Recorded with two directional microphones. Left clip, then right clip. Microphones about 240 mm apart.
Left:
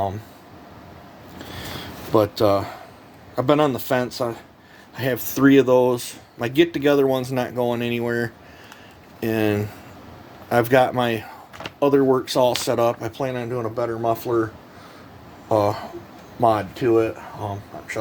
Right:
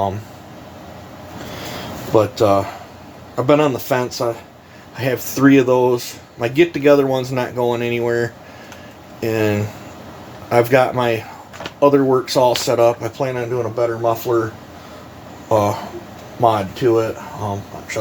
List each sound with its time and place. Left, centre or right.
2.1 s speech: left
15.4 s speech: left